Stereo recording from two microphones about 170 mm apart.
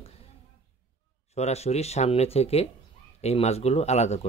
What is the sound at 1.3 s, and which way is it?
Speech, 40° left (ahead or behind).